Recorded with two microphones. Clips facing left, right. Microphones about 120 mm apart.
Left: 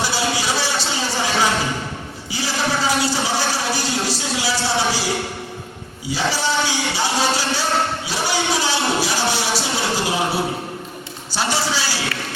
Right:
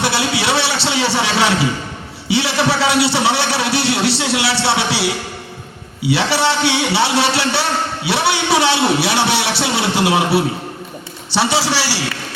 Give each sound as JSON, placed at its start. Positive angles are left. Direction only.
{"t": 0.0, "sound": "a sound", "side_deg": -65}
{"t": 2.3, "sound": "a man's voice", "side_deg": -70}
{"t": 11.3, "sound": "a man's voice", "side_deg": -80}